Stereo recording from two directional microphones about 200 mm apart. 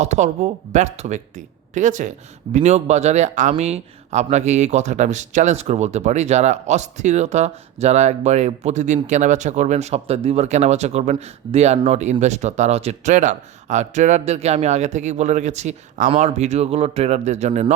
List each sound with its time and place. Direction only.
0.0 s speech: 35° right (ahead or behind)